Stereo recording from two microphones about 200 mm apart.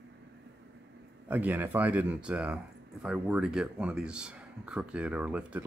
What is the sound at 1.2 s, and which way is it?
Speech, 10° right (ahead or behind).